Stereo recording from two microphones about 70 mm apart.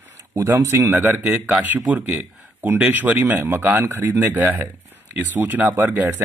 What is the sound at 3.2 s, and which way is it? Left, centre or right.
Speech, right.